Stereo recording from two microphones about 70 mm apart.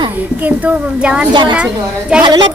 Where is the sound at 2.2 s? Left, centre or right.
Right.